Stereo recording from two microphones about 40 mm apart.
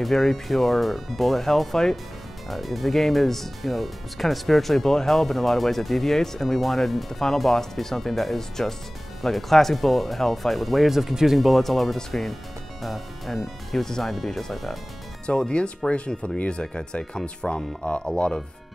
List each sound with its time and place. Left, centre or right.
0.0 s speech: centre
15.2 s speech: left